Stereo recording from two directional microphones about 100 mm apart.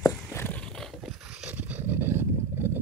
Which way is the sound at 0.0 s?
25° left (ahead or behind).